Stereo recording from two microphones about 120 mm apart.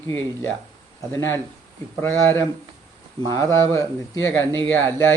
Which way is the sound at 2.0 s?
20° left (ahead or behind).